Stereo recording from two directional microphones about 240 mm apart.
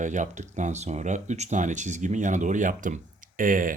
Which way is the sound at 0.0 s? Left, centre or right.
Right.